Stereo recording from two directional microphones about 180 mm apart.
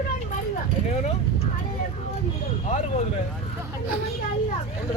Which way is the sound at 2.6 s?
40° left (ahead or behind).